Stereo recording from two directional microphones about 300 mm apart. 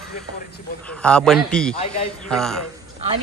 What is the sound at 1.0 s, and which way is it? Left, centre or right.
A man's voice, centre.